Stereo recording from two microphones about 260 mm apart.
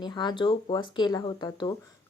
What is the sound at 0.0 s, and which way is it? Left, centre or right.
Speech, centre.